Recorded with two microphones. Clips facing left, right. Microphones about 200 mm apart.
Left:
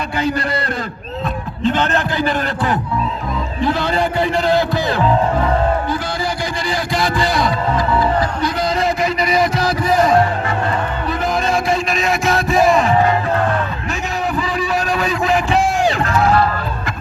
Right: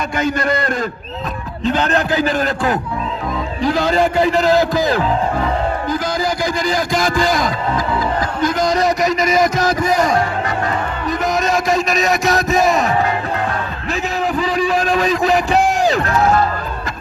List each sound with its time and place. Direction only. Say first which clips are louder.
0.2 s a man's voice: right 2 dB; 35° left (ahead or behind)
1.6 s a man's voice: even; 40° right (ahead or behind)
6.7 s music: even; 45° right (ahead or behind)
8.8 s a sound: right 2 dB; 45° right (ahead or behind)
11.5 s a sound: right 1 dB; 40° right (ahead or behind)
14.3 s music: right 4 dB; 40° right (ahead or behind)